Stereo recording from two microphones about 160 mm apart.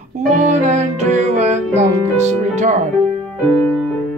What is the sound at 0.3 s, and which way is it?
Music, 50° right (ahead or behind).